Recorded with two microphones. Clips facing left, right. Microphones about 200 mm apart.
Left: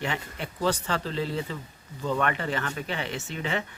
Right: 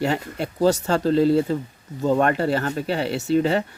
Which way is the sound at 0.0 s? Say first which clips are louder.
Right 9 dB; 40° right (ahead or behind).